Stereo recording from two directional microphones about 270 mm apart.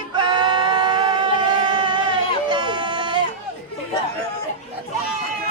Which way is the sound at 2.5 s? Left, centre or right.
Centre.